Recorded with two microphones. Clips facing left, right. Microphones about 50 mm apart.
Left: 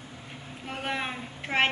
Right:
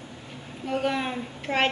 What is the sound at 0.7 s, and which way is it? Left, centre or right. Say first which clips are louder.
A woman's voice: right 6 dB; centre.